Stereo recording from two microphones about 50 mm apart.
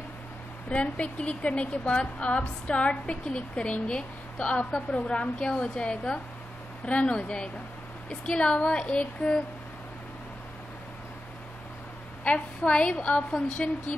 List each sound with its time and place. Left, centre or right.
0.7 s a woman's voice: left
4.7 s a woman's voice: centre
12.3 s a woman's voice: left